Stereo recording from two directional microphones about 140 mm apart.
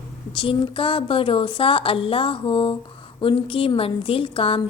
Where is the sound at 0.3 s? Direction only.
40° left (ahead or behind).